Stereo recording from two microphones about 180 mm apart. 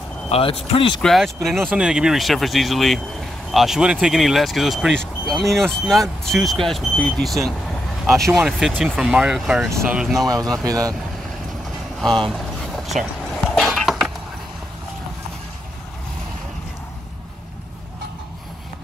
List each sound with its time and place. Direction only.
0.3 s speech: 30° left (ahead or behind)
1.0 s speech: centre (ahead or behind)
9.7 s speech: 15° right (ahead or behind)
9.9 s speech: 5° right (ahead or behind)
10.2 s speech: 20° right (ahead or behind)
12.3 s a sound: centre (ahead or behind)